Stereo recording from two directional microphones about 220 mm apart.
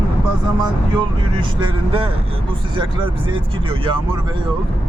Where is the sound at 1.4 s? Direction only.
25° right (ahead or behind).